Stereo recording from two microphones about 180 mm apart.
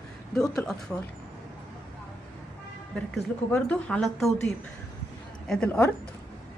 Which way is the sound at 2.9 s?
5° left (ahead or behind).